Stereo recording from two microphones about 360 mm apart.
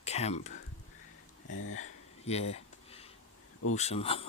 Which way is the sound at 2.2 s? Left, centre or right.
Centre.